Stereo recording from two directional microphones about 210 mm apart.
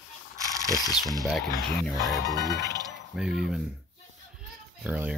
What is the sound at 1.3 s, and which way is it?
Speech, centre (ahead or behind).